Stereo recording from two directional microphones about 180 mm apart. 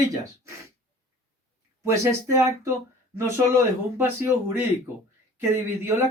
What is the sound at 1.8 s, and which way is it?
A man's voice, 15° right (ahead or behind).